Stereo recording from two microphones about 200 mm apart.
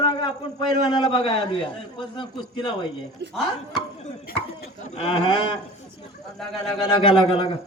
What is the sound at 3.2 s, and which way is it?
Speech, 60° right (ahead or behind).